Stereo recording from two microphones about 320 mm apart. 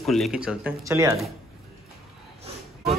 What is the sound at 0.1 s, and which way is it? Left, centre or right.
Speech, centre.